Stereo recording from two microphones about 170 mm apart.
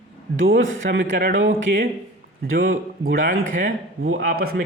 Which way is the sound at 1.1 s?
60° right (ahead or behind).